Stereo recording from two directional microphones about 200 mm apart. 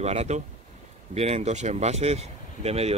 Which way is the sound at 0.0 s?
35° right (ahead or behind).